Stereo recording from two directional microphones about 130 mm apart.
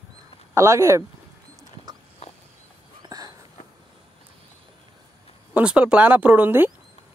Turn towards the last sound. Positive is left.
turn(degrees=-15)  # may be behind; listen again after turning